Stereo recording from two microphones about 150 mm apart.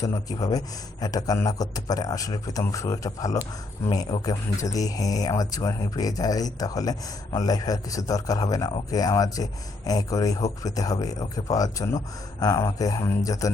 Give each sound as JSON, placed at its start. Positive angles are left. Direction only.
{"t": 0.0, "sound": "a man's voice", "side_deg": 25}